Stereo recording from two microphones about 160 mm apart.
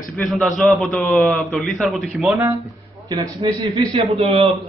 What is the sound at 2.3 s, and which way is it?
A man's voice, 20° right (ahead or behind).